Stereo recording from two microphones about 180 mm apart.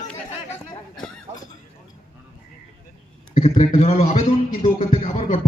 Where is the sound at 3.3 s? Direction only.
40° left (ahead or behind).